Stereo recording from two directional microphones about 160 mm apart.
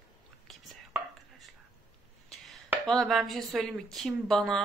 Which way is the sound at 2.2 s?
Centre (ahead or behind).